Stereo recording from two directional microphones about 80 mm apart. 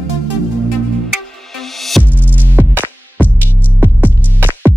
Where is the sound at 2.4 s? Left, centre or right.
Right.